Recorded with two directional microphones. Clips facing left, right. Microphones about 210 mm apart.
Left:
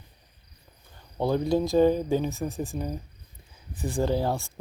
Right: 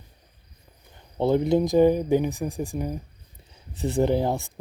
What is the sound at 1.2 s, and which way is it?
Speech, 20° right (ahead or behind).